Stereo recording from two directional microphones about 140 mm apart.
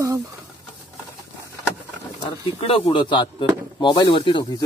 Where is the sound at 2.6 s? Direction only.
40° left (ahead or behind).